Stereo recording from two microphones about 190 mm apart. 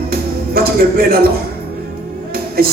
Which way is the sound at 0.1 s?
55° right (ahead or behind).